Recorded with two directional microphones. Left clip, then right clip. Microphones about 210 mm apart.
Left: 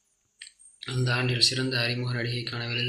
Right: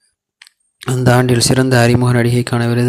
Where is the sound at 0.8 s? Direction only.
60° right (ahead or behind).